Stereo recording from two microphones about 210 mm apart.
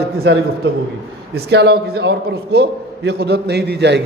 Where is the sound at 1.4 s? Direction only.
50° right (ahead or behind).